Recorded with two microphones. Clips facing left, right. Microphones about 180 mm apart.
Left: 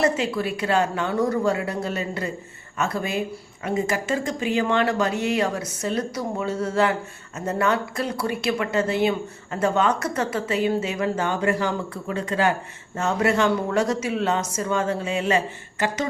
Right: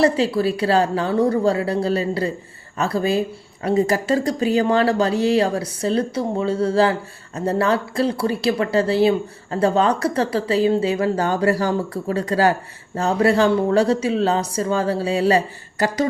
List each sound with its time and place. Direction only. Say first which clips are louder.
0.0 s speech: right 5 dB; 30° right (ahead or behind)